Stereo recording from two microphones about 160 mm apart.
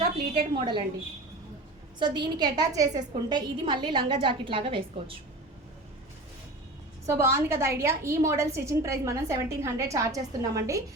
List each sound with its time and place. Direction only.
0.3 s a woman's voice: 30° right (ahead or behind)
2.0 s a woman's voice: 30° right (ahead or behind)
7.0 s a woman's voice: 20° right (ahead or behind)